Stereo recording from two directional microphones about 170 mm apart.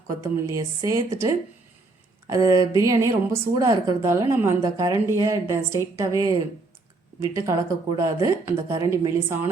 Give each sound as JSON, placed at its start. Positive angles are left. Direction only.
{"t": 0.1, "sound": "a woman's voice", "side_deg": -20}